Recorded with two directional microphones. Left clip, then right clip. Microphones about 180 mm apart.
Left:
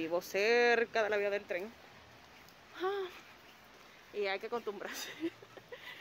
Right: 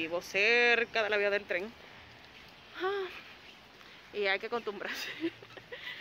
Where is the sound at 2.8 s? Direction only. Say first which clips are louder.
Right 3 dB; 15° left (ahead or behind).